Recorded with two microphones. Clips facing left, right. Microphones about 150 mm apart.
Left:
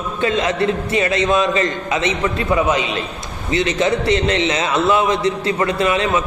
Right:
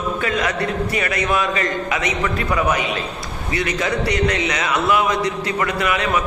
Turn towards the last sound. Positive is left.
turn(degrees=25)  # may be behind; listen again after turning